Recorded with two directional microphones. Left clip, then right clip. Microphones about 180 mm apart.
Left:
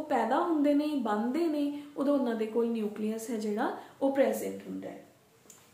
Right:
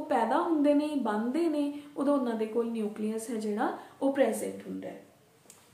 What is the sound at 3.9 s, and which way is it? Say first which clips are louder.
Speech: even; 15° right (ahead or behind).